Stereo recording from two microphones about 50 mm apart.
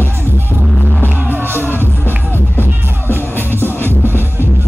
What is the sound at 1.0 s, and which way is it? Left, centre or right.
Music, right.